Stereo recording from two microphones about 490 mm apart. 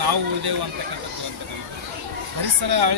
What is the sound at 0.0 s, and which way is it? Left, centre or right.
Speech, right.